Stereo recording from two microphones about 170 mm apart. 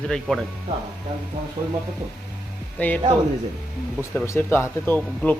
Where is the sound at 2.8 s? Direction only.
10° left (ahead or behind).